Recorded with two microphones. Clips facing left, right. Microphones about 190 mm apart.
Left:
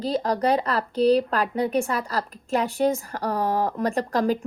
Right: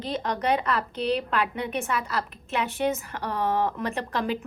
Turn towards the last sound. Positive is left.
turn(degrees=40)  # may be behind; listen again after turning